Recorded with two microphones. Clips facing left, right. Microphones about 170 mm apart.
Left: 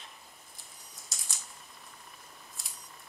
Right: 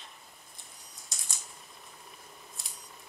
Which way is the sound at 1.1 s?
Centre (ahead or behind).